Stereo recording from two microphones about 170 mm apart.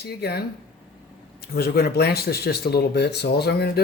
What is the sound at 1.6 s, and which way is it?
Speech, 65° left (ahead or behind).